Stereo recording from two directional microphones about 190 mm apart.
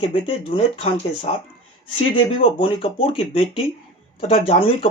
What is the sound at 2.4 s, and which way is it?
Speech, 30° left (ahead or behind).